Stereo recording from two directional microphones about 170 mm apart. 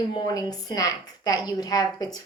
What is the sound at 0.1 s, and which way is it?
A woman's voice, 20° left (ahead or behind).